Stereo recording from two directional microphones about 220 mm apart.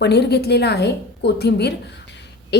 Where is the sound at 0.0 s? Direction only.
50° left (ahead or behind).